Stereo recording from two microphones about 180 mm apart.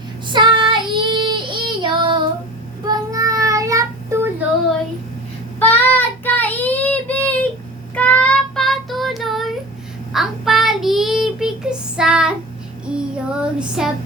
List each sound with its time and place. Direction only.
0.3 s child singing: 25° right (ahead or behind)
5.5 s child singing: 10° left (ahead or behind)